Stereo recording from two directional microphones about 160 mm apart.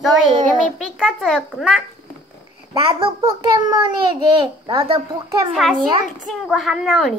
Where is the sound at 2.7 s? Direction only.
35° right (ahead or behind).